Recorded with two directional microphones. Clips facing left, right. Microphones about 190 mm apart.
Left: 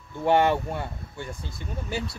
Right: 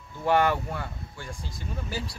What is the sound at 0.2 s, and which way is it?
Speech, 25° left (ahead or behind).